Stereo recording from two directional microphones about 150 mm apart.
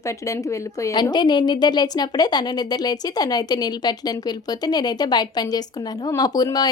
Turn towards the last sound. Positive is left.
turn(degrees=25)  # may be behind; listen again after turning